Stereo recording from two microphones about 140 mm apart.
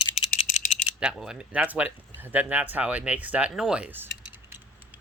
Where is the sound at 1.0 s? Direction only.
5° right (ahead or behind).